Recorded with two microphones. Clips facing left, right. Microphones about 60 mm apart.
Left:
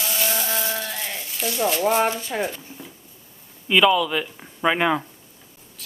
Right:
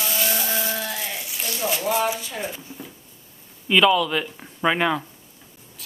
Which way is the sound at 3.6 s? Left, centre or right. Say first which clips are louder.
Even; centre.